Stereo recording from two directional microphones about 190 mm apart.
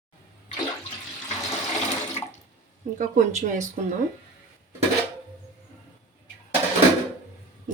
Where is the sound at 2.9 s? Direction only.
40° right (ahead or behind).